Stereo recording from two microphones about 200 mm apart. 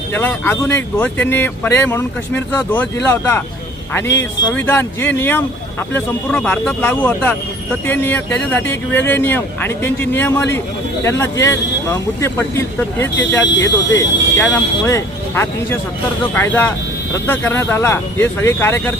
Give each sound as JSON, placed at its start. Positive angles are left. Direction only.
{"t": 0.1, "sound": "speech", "side_deg": 10}
{"t": 4.5, "sound": "speech", "side_deg": 10}
{"t": 13.5, "sound": "speech", "side_deg": 60}
{"t": 13.9, "sound": "speech", "side_deg": 10}